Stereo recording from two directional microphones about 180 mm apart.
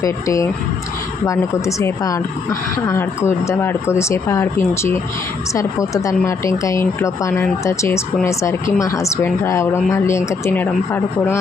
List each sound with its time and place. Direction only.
0.0 s a woman's voice: 15° left (ahead or behind)